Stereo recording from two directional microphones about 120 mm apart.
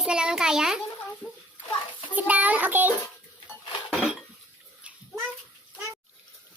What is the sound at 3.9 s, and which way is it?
Dishes, 5° right (ahead or behind).